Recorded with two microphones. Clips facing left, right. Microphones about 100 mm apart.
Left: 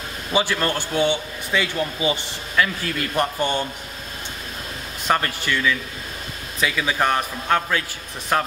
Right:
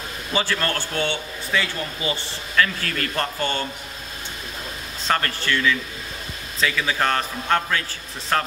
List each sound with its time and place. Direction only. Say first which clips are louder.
0.3 s a man's voice: left 3 dB; 15° left (ahead or behind)
5.0 s a man's voice: left 1 dB; 15° left (ahead or behind)